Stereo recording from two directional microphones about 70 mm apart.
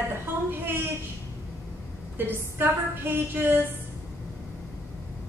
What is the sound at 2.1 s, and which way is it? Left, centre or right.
A woman's voice, right.